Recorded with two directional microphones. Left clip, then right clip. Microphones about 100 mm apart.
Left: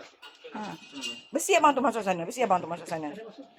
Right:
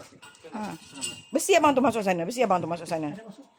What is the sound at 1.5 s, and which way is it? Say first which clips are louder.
A woman's voice: right 1 dB; 35° right (ahead or behind).